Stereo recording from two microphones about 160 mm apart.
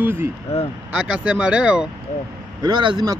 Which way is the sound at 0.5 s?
40° left (ahead or behind).